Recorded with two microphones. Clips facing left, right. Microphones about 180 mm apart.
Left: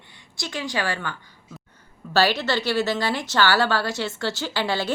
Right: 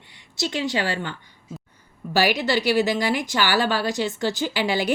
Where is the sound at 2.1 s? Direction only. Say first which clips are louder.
Even; 15° right (ahead or behind).